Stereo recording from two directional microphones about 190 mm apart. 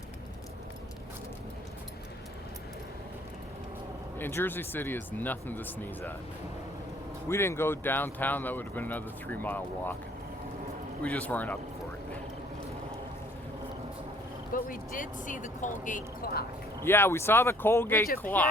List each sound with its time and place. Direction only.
4.2 s speech: 10° left (ahead or behind)
7.3 s speech: 15° left (ahead or behind)
11.0 s speech: 5° left (ahead or behind)
14.5 s speech: 45° left (ahead or behind)
16.8 s speech: 10° left (ahead or behind)